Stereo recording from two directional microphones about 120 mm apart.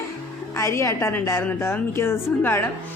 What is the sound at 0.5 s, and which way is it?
A woman's voice, 25° left (ahead or behind).